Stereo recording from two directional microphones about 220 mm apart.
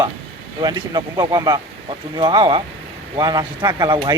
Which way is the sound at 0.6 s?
20° right (ahead or behind).